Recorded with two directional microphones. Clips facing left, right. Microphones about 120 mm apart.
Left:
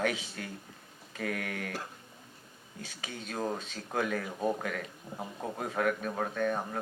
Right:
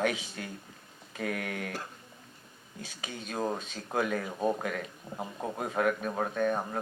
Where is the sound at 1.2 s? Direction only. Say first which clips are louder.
Right 1 dB; 25° right (ahead or behind).